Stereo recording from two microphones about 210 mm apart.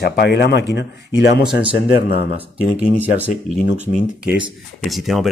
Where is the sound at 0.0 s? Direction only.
50° left (ahead or behind).